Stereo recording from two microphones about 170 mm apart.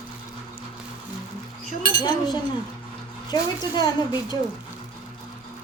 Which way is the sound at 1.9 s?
20° left (ahead or behind).